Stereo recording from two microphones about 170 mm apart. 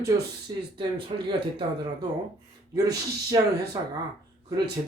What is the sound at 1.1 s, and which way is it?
Speech, 35° right (ahead or behind).